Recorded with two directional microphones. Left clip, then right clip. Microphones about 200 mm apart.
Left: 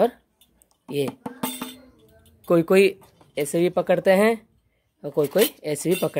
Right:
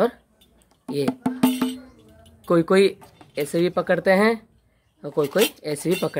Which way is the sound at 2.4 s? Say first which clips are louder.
Even; 25° left (ahead or behind).